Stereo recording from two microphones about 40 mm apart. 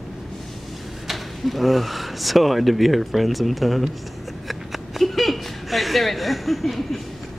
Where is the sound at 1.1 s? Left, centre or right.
Centre.